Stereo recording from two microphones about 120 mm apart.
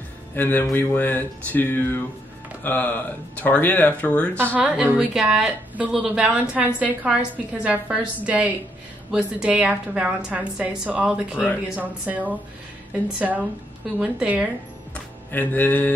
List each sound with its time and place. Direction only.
0.4 s speech: 15° left (ahead or behind)
4.6 s a woman's voice: 10° right (ahead or behind)
15.3 s speech: 15° left (ahead or behind)